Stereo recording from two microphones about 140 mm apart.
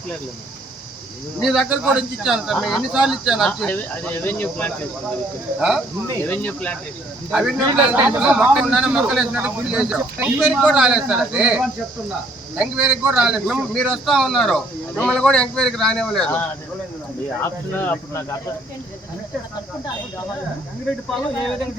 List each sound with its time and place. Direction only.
1.4 s speech: 5° right (ahead or behind)
3.7 s speech: 15° left (ahead or behind)
5.5 s speech: 5° right (ahead or behind)
6.1 s speech: 10° left (ahead or behind)
7.3 s speech: 5° right (ahead or behind)
7.6 s speech: 30° right (ahead or behind)
8.1 s speech: 10° right (ahead or behind)
17.7 s speech: 15° left (ahead or behind)